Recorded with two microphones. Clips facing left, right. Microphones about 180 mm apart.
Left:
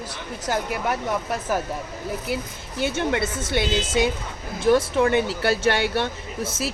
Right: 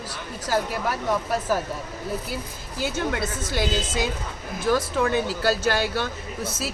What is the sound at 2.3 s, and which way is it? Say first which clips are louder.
Speech: left 4 dB; 25° left (ahead or behind).